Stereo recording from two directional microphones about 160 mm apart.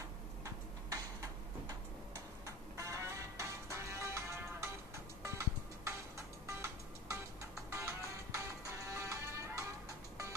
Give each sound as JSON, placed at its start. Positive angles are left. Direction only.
{"t": 0.8, "sound": "tick-tock", "side_deg": -20}
{"t": 5.2, "sound": "music", "side_deg": -20}